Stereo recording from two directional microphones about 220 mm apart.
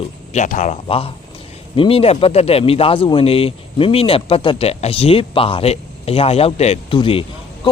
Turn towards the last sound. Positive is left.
turn(degrees=25)  # may be behind; listen again after turning